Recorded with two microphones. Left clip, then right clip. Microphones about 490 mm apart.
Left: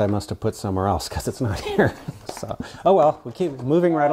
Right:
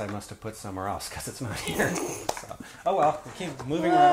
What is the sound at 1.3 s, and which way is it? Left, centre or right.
Speech, left.